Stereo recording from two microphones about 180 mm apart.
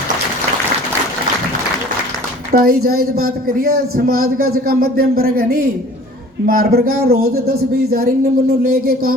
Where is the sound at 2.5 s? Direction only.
55° right (ahead or behind).